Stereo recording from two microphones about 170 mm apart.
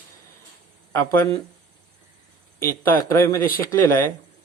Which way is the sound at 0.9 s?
15° left (ahead or behind).